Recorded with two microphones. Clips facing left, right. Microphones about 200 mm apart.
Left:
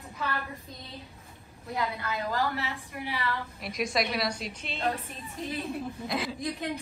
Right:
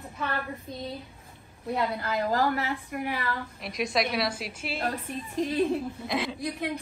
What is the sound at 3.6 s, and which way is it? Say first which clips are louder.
A woman's voice: right 2 dB; centre (ahead or behind).